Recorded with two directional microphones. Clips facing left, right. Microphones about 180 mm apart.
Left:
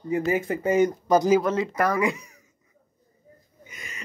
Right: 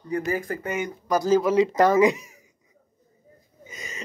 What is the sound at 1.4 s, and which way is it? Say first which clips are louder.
Speech: right 5 dB; 10° right (ahead or behind).